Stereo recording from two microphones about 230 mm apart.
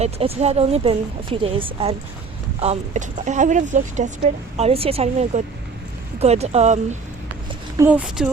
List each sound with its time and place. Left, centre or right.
0.0 s a woman's voice: right
7.8 s speech: centre